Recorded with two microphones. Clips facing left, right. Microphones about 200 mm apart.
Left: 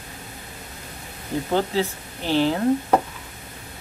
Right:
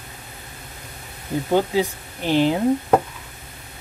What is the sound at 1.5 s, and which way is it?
Speech, 15° right (ahead or behind).